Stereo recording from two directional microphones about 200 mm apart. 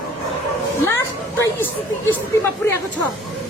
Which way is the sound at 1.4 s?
10° left (ahead or behind).